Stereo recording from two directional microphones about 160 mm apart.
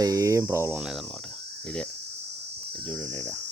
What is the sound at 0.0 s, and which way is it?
Cricket, 20° right (ahead or behind).